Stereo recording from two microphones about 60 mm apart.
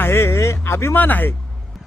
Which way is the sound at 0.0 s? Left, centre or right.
Left.